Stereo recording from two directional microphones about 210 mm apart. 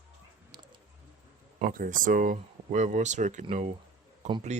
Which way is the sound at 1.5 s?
40° right (ahead or behind).